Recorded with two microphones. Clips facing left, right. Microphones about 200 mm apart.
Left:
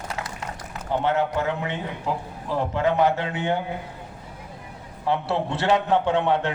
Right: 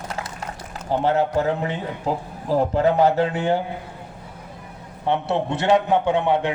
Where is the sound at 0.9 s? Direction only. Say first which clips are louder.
Right 3 dB; 35° right (ahead or behind).